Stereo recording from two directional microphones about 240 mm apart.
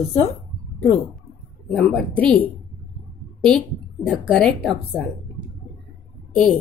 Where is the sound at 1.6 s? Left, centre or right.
Centre.